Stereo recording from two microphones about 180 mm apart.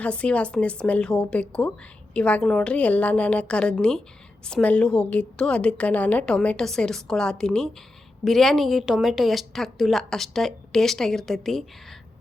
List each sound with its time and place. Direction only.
0.0 s a woman's voice: 5° left (ahead or behind)